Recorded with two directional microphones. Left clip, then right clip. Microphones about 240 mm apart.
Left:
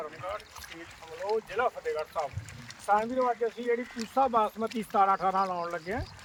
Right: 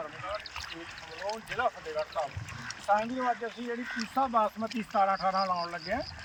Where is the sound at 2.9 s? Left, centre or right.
Left.